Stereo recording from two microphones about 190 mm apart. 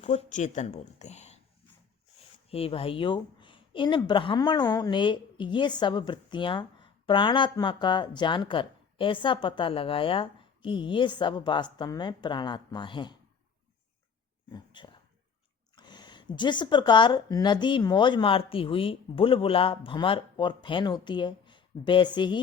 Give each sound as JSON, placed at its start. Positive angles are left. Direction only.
{"t": 0.0, "sound": "speech", "side_deg": 40}
{"t": 2.5, "sound": "a woman's voice", "side_deg": 30}
{"t": 14.5, "sound": "a woman's voice", "side_deg": 25}